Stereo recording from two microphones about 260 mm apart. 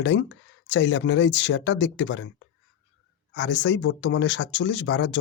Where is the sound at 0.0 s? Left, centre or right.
Left.